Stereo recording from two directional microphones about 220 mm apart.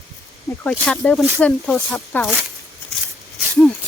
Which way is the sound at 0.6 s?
5° left (ahead or behind).